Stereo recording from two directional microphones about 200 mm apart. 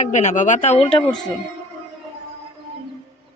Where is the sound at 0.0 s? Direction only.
35° left (ahead or behind).